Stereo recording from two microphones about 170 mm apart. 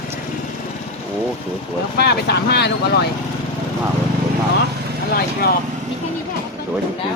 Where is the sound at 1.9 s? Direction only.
75° left (ahead or behind).